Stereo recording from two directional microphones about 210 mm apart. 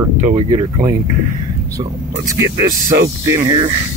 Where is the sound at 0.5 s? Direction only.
20° right (ahead or behind).